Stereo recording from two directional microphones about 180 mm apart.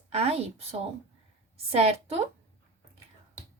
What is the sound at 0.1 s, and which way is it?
A woman's voice, 35° right (ahead or behind).